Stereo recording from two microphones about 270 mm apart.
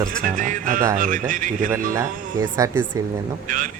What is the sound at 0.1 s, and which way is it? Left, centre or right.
Speech, right.